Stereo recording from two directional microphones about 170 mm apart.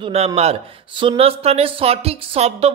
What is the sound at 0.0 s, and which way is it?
Speech, 35° right (ahead or behind).